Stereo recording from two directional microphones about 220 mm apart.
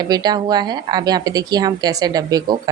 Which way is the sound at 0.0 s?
20° right (ahead or behind).